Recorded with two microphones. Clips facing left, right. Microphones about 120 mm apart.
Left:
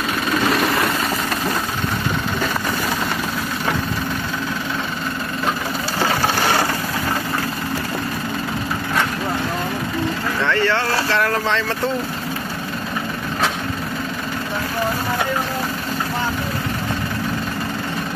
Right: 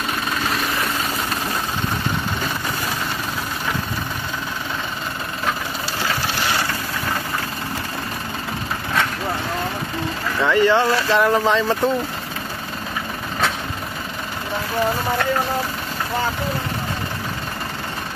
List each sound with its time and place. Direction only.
6.4 s a sound: 50° left (ahead or behind)
10.4 s boat: 15° right (ahead or behind)
11.1 s speech: 20° right (ahead or behind)